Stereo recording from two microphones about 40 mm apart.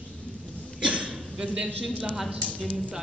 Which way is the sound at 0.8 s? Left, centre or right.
Right.